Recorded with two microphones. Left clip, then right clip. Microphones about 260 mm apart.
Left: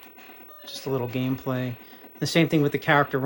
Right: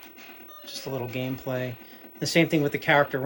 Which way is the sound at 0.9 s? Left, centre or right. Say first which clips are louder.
Left 3 dB; centre.